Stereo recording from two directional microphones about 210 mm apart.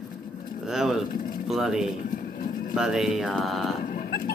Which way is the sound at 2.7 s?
Centre (ahead or behind).